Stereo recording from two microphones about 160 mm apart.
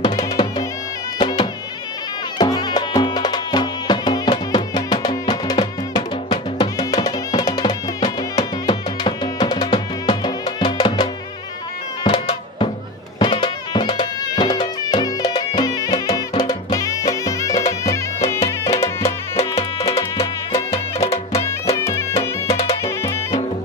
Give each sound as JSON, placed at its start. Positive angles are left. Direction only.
{"t": 0.0, "sound": "music", "side_deg": 25}
{"t": 19.3, "sound": "music", "side_deg": 40}
{"t": 21.7, "sound": "music", "side_deg": 15}